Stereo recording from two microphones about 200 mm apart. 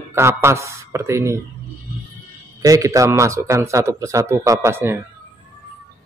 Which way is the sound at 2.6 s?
15° right (ahead or behind).